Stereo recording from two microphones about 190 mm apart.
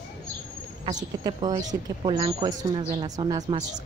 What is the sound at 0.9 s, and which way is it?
Speech, 20° right (ahead or behind).